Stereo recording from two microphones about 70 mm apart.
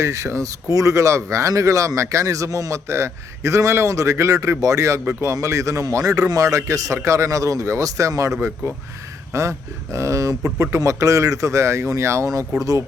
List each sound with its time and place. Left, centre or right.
0.0 s speech: right